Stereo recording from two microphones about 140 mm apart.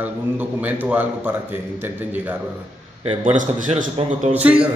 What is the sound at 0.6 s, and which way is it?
Speech, 10° right (ahead or behind).